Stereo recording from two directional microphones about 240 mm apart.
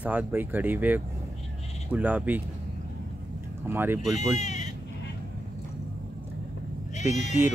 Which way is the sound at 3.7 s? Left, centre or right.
Centre.